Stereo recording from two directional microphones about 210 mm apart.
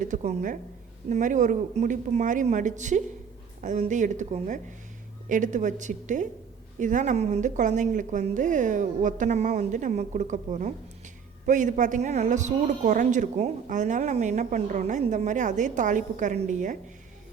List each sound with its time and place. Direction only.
0.0 s a woman's voice: 35° right (ahead or behind)